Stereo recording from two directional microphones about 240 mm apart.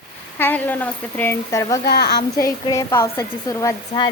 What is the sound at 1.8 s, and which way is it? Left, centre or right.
Speech, left.